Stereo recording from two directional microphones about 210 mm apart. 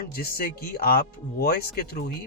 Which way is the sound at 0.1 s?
45° left (ahead or behind).